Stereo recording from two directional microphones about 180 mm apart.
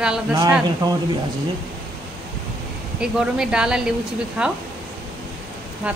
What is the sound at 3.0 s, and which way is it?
Speech, 5° right (ahead or behind).